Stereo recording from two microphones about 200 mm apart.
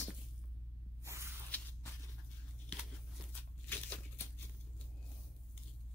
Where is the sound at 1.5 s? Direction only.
5° left (ahead or behind).